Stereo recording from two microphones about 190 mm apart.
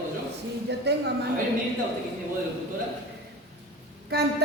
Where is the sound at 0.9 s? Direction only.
60° right (ahead or behind).